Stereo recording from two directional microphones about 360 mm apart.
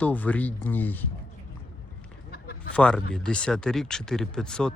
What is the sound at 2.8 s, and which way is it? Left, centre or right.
Speech, centre.